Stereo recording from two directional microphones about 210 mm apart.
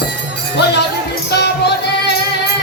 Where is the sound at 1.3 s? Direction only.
50° left (ahead or behind).